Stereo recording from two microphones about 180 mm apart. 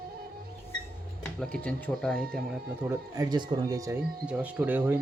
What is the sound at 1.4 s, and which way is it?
Speech, 5° left (ahead or behind).